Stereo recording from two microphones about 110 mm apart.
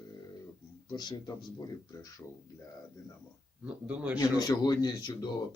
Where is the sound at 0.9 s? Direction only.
40° left (ahead or behind).